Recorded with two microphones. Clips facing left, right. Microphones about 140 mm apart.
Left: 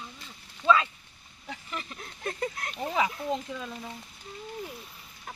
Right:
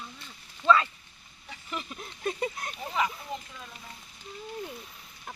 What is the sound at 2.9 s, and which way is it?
Speech, 70° left (ahead or behind).